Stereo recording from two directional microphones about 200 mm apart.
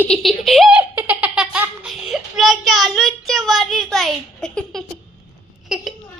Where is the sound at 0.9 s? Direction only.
10° right (ahead or behind).